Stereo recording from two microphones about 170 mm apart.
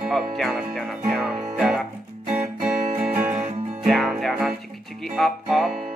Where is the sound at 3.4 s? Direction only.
35° right (ahead or behind).